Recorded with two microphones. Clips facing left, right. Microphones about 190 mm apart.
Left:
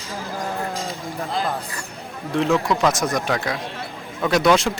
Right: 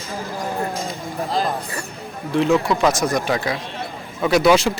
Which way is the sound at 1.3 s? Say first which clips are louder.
Right 3 dB; 35° right (ahead or behind).